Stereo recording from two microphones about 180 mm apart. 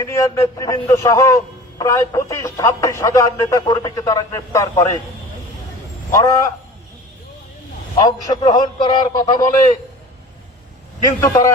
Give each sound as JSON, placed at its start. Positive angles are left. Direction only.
{"t": 0.0, "sound": "a man's voice", "side_deg": 20}
{"t": 6.1, "sound": "speech", "side_deg": 15}
{"t": 7.9, "sound": "a man's voice", "side_deg": 25}
{"t": 11.0, "sound": "speech", "side_deg": 20}